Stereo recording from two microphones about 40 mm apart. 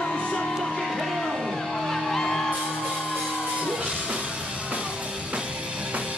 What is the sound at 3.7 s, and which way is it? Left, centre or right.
Music, right.